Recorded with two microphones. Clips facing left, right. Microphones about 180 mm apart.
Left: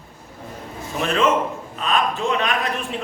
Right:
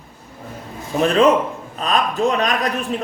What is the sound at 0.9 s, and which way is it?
A man's voice, 35° right (ahead or behind).